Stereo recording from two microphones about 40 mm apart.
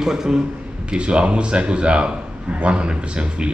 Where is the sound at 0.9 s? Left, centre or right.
Right.